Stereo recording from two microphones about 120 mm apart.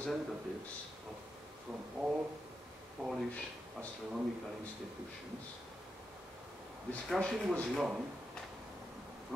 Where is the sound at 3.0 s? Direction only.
10° right (ahead or behind).